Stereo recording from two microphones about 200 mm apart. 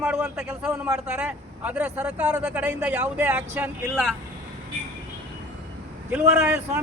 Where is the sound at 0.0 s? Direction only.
5° right (ahead or behind).